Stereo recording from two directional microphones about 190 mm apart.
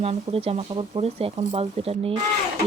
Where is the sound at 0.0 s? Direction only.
30° right (ahead or behind).